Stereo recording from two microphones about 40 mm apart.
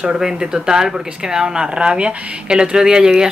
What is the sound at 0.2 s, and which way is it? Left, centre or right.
Speech, centre.